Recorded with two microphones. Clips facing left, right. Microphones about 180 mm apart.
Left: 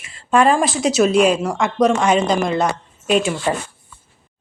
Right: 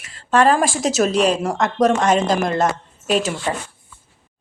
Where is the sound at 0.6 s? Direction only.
45° right (ahead or behind).